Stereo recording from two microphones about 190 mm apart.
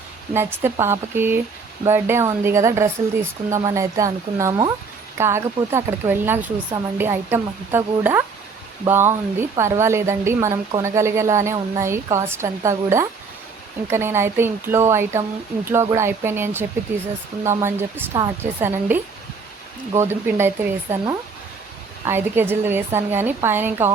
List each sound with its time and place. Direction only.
0.3 s a woman's voice: 15° right (ahead or behind)
20.0 s a woman's voice: 15° right (ahead or behind)
22.0 s a woman's voice: 10° right (ahead or behind)